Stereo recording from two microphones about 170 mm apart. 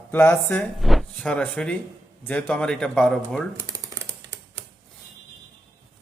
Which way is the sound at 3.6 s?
20° right (ahead or behind).